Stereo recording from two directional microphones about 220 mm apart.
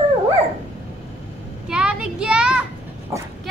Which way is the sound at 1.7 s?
5° right (ahead or behind).